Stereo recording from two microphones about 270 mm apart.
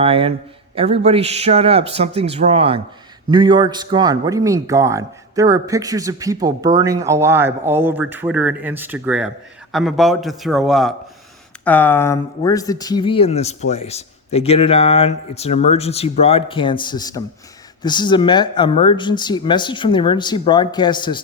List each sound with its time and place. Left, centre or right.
0.0 s a man's voice: right; by 21.2 s centre